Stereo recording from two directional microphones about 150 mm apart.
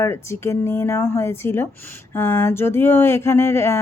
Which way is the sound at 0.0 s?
15° left (ahead or behind).